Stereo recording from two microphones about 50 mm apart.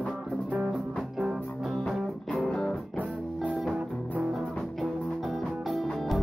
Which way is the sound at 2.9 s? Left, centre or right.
Left.